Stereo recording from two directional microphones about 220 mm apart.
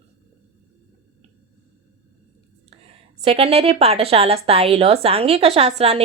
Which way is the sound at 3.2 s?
25° right (ahead or behind).